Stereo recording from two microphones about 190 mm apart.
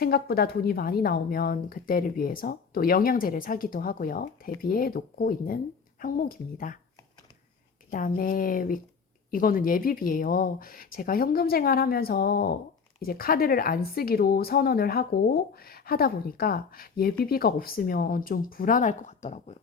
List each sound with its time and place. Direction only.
0.0 s speech: 55° left (ahead or behind)
7.9 s speech: 45° left (ahead or behind)